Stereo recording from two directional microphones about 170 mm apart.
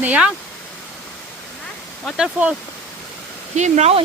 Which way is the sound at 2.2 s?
5° right (ahead or behind).